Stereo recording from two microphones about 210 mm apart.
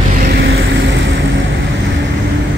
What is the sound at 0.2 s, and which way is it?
Vehicle, 45° right (ahead or behind).